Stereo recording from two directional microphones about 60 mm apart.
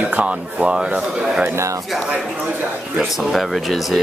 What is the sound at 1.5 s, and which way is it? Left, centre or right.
Speech, right.